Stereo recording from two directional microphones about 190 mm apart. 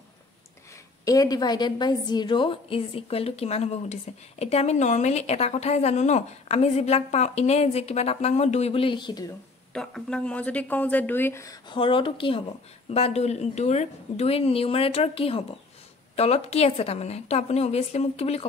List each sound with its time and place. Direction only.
1.0 s a woman's voice: 20° left (ahead or behind)
9.8 s speech: 5° left (ahead or behind)
11.7 s a woman's voice: 25° left (ahead or behind)